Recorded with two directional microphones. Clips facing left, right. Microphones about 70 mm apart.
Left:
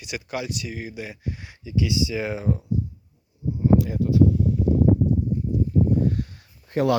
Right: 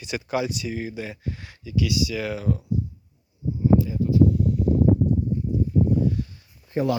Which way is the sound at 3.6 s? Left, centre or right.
Left.